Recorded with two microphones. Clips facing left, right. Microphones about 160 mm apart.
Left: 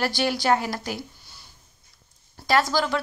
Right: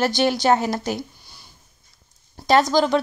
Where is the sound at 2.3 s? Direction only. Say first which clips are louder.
Right 5 dB; 20° right (ahead or behind).